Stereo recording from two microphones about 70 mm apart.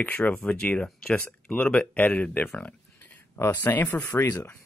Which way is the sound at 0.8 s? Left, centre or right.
Centre.